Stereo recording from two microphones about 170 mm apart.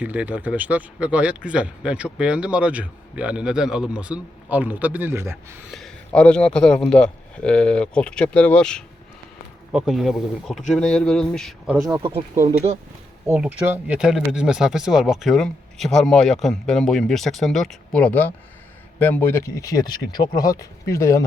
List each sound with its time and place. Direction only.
0.0 s speech: 10° right (ahead or behind)
6.1 s speech: 5° left (ahead or behind)
13.3 s speech: 5° right (ahead or behind); by 21.2 s 15° left (ahead or behind)